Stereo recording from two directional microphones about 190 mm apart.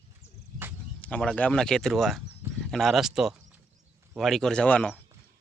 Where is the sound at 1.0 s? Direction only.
5° left (ahead or behind).